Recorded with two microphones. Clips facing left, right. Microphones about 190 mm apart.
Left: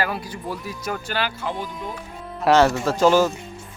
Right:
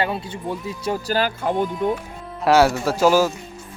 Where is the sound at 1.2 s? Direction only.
50° right (ahead or behind).